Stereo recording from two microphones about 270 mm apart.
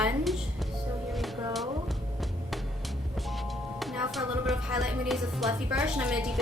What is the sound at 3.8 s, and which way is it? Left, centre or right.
Speech, centre.